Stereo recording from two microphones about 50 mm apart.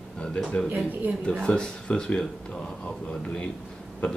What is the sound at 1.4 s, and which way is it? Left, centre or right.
Speech, centre.